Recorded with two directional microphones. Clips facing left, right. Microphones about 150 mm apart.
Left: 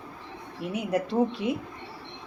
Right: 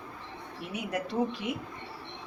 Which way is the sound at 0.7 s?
25° left (ahead or behind).